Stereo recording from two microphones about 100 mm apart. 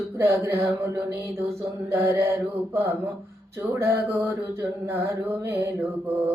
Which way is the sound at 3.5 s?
25° right (ahead or behind).